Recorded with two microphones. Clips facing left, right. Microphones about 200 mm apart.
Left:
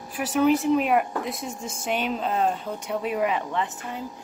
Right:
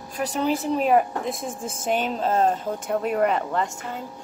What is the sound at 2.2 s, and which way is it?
Speech, 40° right (ahead or behind).